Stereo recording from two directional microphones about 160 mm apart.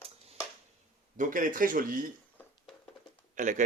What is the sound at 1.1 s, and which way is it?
Speech, 55° right (ahead or behind).